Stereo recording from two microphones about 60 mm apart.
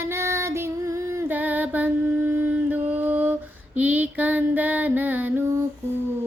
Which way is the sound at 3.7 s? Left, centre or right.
Right.